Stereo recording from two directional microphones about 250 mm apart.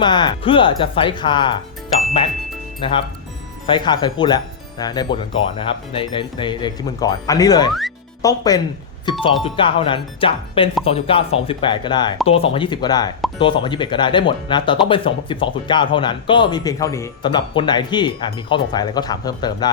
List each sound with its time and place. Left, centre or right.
0.0 s speech: centre
2.8 s speech: centre
7.7 s music: centre
8.2 s speech: centre